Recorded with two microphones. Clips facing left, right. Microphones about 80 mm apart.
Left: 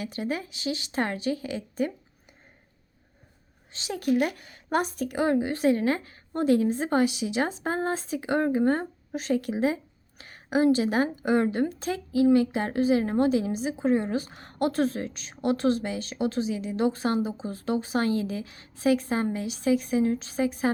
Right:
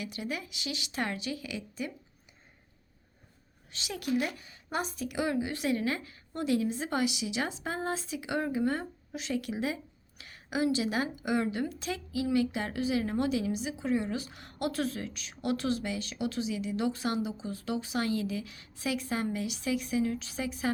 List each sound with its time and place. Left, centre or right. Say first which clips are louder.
0.0 s a woman's voice: left 6 dB; left
3.7 s a woman's voice: left 6 dB; left
4.2 s a woman's voice: left 7 dB; left